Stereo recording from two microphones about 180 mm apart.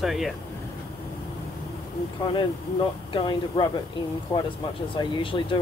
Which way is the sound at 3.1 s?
25° left (ahead or behind).